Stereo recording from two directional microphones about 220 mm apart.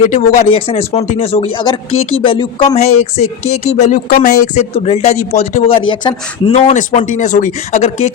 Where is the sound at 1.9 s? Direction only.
70° left (ahead or behind).